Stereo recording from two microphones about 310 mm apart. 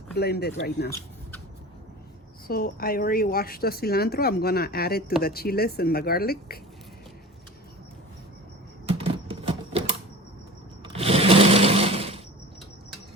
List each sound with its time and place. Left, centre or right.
0.2 s speech: left
2.5 s a woman's voice: left
8.9 s a sound: centre
10.8 s sewing machine: centre